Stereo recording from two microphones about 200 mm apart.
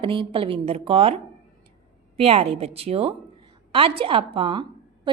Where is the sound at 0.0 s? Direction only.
25° right (ahead or behind).